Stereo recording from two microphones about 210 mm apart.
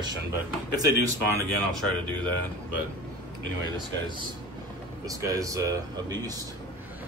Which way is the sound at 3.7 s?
20° right (ahead or behind).